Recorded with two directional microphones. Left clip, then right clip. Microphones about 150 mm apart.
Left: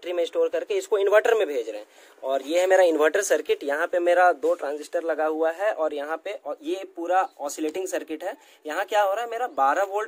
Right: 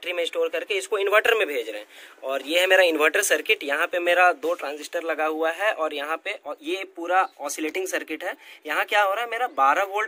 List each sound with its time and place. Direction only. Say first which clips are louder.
0.0 s speech: left 1 dB; 45° left (ahead or behind)